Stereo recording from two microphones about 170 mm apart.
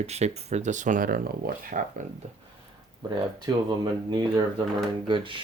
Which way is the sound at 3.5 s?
25° right (ahead or behind).